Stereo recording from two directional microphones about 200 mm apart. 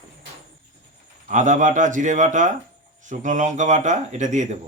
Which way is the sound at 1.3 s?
40° right (ahead or behind).